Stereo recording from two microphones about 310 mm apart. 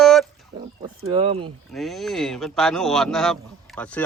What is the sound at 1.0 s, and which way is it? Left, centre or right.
Speech, centre.